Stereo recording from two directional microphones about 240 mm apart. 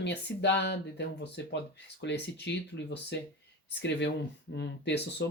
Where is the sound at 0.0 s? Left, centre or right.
Left.